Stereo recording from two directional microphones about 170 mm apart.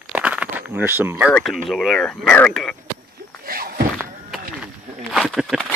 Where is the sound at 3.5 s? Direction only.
60° right (ahead or behind).